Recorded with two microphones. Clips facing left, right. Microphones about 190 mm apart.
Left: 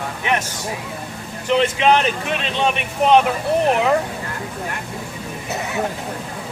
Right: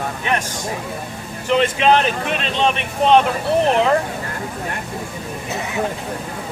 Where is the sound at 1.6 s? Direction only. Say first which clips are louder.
Right 1 dB; 15° left (ahead or behind).